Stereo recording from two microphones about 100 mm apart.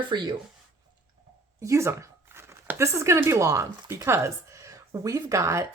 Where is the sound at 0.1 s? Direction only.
45° right (ahead or behind).